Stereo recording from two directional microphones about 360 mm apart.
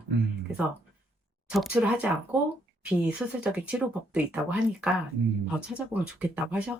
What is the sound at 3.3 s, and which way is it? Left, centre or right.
Speech, centre.